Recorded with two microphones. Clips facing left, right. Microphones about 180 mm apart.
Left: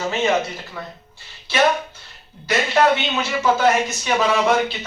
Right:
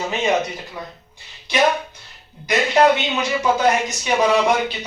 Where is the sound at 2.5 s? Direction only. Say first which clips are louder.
Right 2 dB; 15° right (ahead or behind).